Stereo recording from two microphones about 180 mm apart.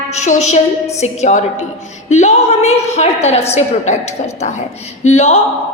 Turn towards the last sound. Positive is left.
turn(degrees=35)  # may be behind; listen again after turning